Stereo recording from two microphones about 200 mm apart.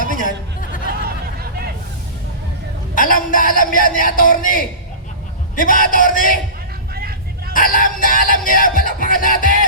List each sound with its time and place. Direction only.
1.0 s a sound: 50° right (ahead or behind)
2.9 s a man's voice: 45° left (ahead or behind)
5.5 s music: 45° left (ahead or behind)
6.9 s vehicle: 50° right (ahead or behind)
7.5 s music: 45° left (ahead or behind)